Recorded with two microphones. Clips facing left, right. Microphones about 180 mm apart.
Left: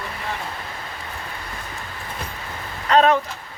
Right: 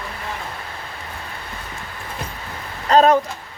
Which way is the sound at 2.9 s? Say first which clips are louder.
Right 2 dB; 35° right (ahead or behind).